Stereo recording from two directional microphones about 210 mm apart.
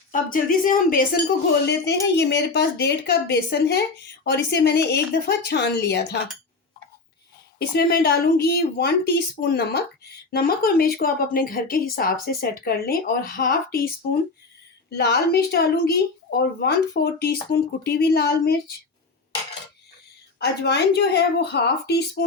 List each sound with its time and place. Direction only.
0.1 s speech: 40° left (ahead or behind)
1.6 s speech: 55° left (ahead or behind)
7.7 s speech: 50° left (ahead or behind)
20.4 s speech: 50° left (ahead or behind)